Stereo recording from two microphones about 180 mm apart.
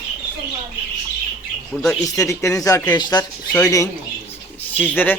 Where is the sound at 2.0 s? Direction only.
15° left (ahead or behind).